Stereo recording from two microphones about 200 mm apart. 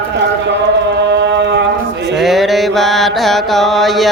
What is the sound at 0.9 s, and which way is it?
Mantra, 60° right (ahead or behind).